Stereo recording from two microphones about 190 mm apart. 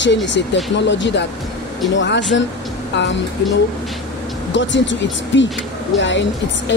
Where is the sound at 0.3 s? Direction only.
70° left (ahead or behind).